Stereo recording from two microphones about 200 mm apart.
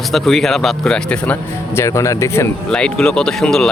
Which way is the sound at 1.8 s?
15° left (ahead or behind).